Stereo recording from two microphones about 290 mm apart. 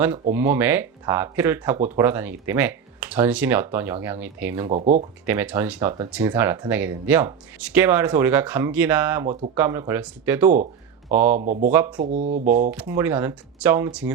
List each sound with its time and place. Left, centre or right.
0.0 s speech: centre
4.7 s speech: right
5.2 s speech: centre
11.3 s speech: right
11.7 s speech: centre
11.9 s speech: right
12.7 s speech: centre